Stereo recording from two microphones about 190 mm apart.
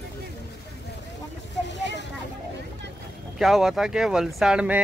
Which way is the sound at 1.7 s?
65° left (ahead or behind).